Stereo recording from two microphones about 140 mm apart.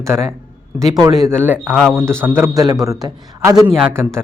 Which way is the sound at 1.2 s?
15° right (ahead or behind).